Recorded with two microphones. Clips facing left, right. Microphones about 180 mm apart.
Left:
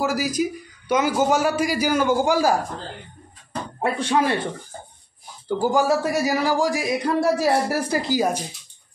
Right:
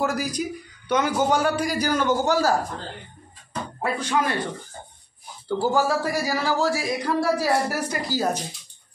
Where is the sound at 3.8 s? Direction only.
25° left (ahead or behind).